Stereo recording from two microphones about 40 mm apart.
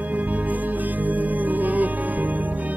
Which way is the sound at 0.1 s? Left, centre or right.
Right.